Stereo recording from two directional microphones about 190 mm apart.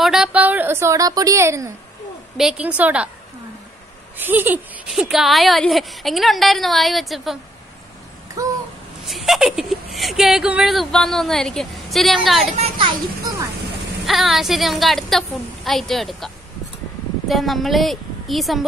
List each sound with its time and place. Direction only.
0.0 s a woman's voice: 5° right (ahead or behind)
2.3 s a woman's voice: 5° right (ahead or behind)
4.2 s a woman's voice: 10° right (ahead or behind)
8.4 s babbling: 20° right (ahead or behind)
9.0 s a woman's voice: centre (ahead or behind)
12.5 s a child's voice: 25° right (ahead or behind)
14.0 s a woman's voice: centre (ahead or behind)
17.3 s a woman's voice: centre (ahead or behind)